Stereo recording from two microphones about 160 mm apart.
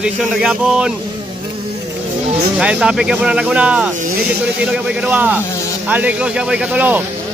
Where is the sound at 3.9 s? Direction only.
60° right (ahead or behind).